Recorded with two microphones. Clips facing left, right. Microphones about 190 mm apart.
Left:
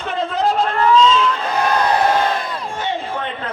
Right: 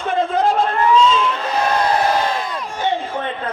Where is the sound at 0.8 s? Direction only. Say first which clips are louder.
Left 1 dB; 15° right (ahead or behind).